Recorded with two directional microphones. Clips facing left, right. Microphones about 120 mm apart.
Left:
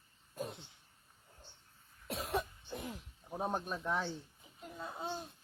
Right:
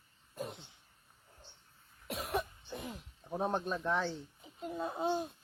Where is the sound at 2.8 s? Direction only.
20° right (ahead or behind).